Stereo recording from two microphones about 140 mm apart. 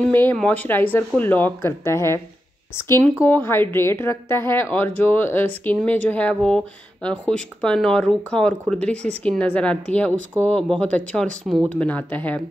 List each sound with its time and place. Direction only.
0.0 s speech: 15° left (ahead or behind)